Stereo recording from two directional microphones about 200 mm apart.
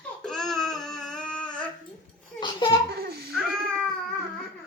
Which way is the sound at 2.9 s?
50° right (ahead or behind).